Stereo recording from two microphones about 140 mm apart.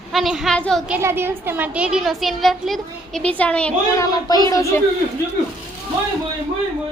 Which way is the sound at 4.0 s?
25° left (ahead or behind).